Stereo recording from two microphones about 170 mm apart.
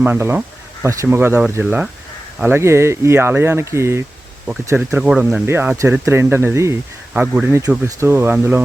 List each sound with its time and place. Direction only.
0.0 s speech: 10° right (ahead or behind)